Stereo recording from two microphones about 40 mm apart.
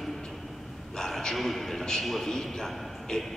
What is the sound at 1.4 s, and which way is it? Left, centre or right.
Speech, centre.